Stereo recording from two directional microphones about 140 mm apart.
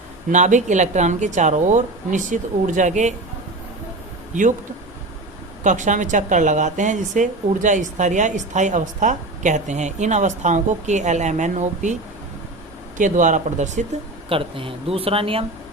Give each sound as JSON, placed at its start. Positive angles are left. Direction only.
{"t": 0.3, "sound": "speech", "side_deg": -60}
{"t": 5.6, "sound": "speech", "side_deg": -60}
{"t": 13.0, "sound": "speech", "side_deg": -65}
{"t": 14.3, "sound": "speech", "side_deg": -40}